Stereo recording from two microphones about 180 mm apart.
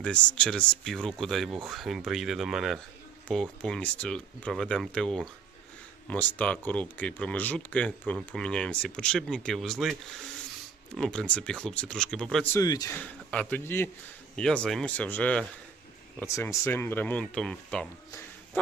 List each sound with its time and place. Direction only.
0.0 s speech: 5° left (ahead or behind)
12.5 s a man's voice: 20° left (ahead or behind)
13.0 s speech: 10° left (ahead or behind)
18.5 s a sound: 10° left (ahead or behind)